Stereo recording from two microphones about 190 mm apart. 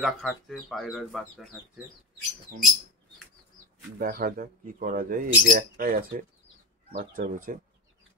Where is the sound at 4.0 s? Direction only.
50° right (ahead or behind).